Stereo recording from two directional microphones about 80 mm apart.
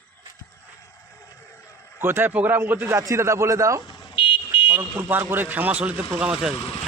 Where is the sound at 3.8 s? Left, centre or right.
Left.